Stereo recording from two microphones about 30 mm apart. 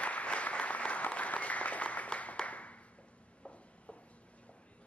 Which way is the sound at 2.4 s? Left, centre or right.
Left.